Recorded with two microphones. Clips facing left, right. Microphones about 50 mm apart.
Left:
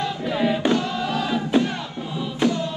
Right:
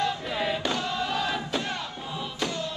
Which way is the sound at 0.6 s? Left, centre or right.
Left.